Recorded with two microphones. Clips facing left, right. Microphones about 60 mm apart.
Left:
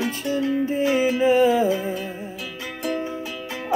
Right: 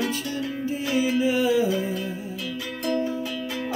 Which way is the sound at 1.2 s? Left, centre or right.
Left.